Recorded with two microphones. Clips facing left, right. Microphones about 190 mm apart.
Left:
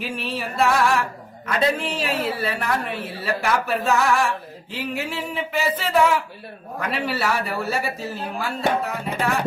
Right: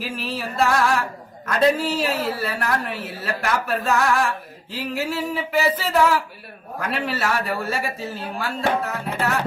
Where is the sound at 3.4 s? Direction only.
Centre (ahead or behind).